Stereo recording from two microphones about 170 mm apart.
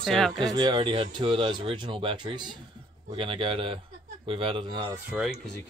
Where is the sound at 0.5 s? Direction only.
25° right (ahead or behind).